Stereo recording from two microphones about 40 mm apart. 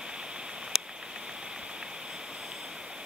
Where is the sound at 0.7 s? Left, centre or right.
Centre.